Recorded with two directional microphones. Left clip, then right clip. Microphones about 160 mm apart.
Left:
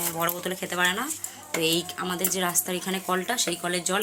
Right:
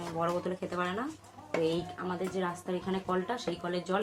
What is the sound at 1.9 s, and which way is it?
Speech, 40° left (ahead or behind).